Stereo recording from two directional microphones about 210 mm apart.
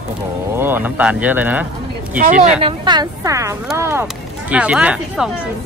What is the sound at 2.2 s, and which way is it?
Speech, 40° right (ahead or behind).